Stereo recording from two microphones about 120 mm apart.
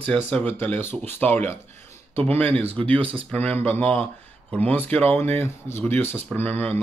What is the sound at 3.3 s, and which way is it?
Speech, 15° left (ahead or behind).